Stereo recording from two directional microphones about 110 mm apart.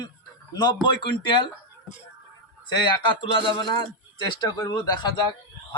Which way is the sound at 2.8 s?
50° left (ahead or behind).